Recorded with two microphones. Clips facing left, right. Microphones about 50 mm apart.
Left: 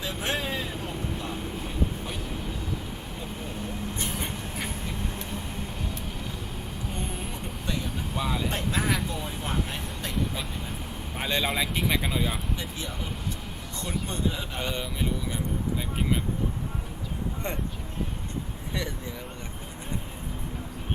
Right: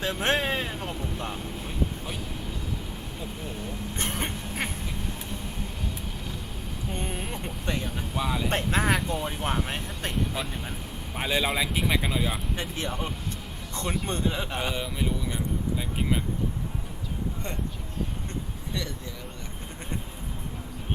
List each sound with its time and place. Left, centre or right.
0.0 s vehicle: right
3.9 s duck: right
8.1 s vehicle: centre
8.4 s vehicle: right
11.2 s speech: centre
12.5 s speech: right
14.7 s speech: centre
18.7 s speech: left